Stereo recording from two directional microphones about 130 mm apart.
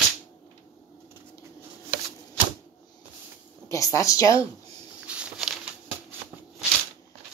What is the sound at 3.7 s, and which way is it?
Speech, 25° left (ahead or behind).